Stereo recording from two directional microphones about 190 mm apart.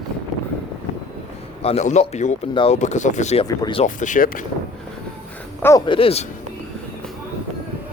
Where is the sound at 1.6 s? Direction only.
35° left (ahead or behind).